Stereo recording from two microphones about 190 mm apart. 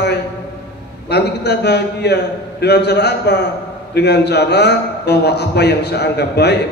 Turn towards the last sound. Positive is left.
turn(degrees=60)  # may be behind; listen again after turning